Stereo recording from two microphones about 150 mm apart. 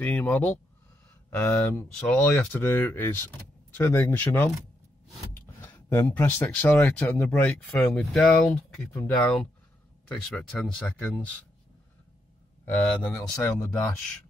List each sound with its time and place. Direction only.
0.0 s speech: 10° left (ahead or behind)
5.6 s speech: 15° left (ahead or behind)
13.1 s speech: 20° left (ahead or behind)